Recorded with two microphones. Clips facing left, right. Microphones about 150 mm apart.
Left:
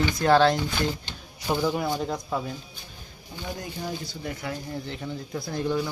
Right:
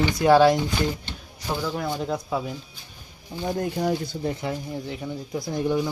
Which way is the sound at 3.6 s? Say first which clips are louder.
Right 11 dB; 65° right (ahead or behind).